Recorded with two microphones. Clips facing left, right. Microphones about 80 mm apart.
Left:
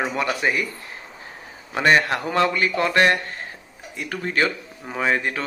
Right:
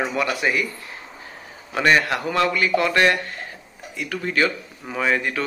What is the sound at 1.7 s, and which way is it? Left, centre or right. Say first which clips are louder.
A man's voice: even; left.